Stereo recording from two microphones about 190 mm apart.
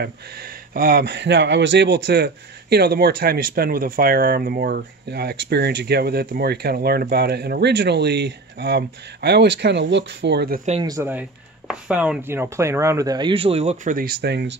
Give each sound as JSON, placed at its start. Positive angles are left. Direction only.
{"t": 0.0, "sound": "speech", "side_deg": -55}
{"t": 10.8, "sound": "speech", "side_deg": -15}